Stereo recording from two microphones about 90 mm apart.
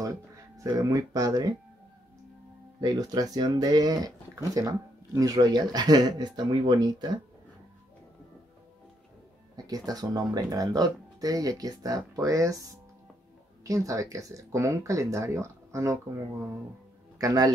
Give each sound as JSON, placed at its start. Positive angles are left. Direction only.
{"t": 0.7, "sound": "speech", "side_deg": -40}
{"t": 2.8, "sound": "speech", "side_deg": -45}
{"t": 9.7, "sound": "speech", "side_deg": -45}
{"t": 13.7, "sound": "speech", "side_deg": -40}
{"t": 17.2, "sound": "speech", "side_deg": -40}